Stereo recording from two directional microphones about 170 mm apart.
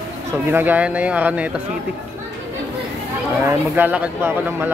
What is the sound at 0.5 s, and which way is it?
Speech, 10° right (ahead or behind).